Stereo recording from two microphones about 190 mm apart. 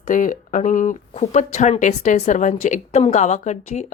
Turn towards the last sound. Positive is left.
turn(degrees=40)  # may be behind; listen again after turning